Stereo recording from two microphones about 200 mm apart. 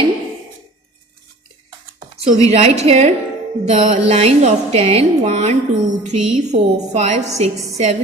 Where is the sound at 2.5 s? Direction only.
30° right (ahead or behind).